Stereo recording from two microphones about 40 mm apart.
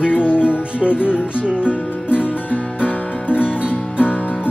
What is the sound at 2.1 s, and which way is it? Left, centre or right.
Music, left.